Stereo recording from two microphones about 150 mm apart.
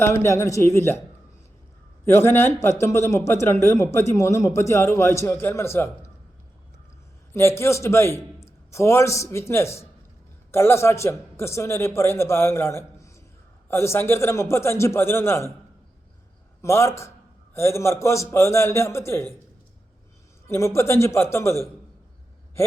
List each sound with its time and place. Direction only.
0.0 s a man's voice: 15° left (ahead or behind)
2.0 s a man's voice: 15° left (ahead or behind)
7.3 s a man's voice: 15° left (ahead or behind)
16.6 s a man's voice: 20° left (ahead or behind)
20.5 s a man's voice: 20° left (ahead or behind)